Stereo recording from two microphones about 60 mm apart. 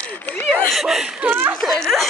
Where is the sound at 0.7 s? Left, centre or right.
Centre.